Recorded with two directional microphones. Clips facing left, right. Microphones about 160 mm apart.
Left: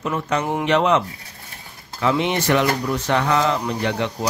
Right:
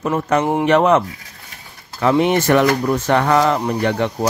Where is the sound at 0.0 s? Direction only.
45° right (ahead or behind).